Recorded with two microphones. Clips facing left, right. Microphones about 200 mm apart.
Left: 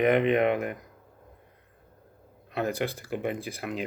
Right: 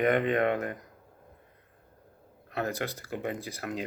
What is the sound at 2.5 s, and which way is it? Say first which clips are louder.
Speech: left 3 dB; 15° left (ahead or behind).